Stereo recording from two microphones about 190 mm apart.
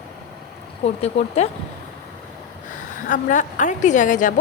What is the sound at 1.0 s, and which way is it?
Speech, 35° left (ahead or behind).